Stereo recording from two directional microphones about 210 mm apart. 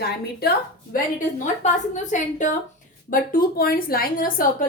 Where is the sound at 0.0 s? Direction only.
50° left (ahead or behind).